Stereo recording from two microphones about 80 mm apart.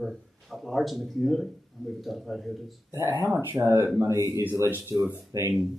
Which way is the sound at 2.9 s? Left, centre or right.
Right.